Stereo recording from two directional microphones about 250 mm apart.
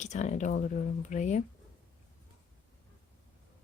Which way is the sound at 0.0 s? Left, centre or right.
Left.